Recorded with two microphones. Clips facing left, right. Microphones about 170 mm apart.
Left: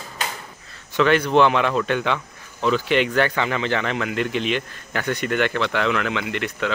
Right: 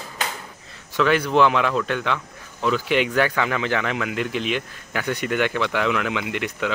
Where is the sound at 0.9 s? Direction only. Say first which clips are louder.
Left 2 dB; 5° right (ahead or behind).